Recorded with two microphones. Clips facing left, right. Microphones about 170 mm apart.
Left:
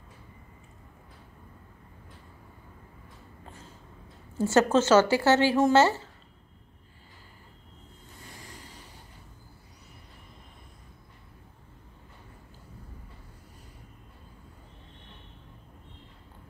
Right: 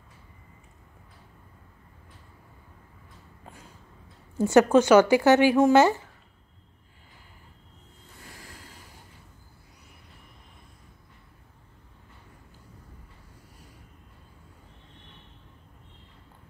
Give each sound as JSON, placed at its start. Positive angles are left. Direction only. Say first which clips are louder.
{"t": 4.4, "sound": "a woman's voice", "louder": "right 4 dB", "side_deg": -15}